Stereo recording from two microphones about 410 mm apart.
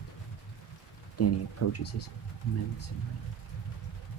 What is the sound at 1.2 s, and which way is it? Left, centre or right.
Speech, left.